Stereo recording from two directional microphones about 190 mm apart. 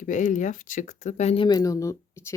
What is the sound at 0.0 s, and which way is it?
Speech, 40° left (ahead or behind).